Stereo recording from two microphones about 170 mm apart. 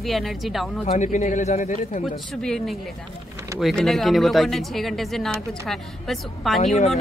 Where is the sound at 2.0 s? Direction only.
5° left (ahead or behind).